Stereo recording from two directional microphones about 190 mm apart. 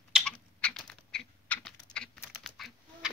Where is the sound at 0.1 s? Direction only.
5° left (ahead or behind).